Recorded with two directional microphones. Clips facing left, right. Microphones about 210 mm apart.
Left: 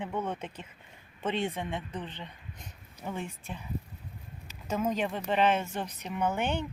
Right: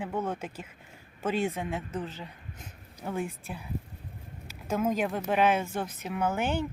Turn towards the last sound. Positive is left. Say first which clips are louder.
# right 1 dB
turn(degrees=-5)  # may be behind; listen again after turning